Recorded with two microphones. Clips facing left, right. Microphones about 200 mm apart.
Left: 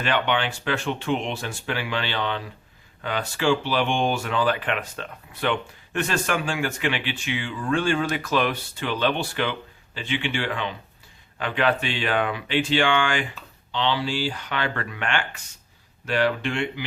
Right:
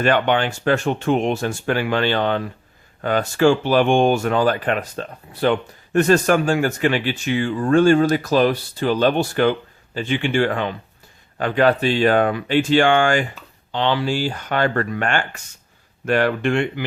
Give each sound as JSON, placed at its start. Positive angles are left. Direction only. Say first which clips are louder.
{"t": 0.0, "sound": "speech", "louder": "right 6 dB", "side_deg": -45}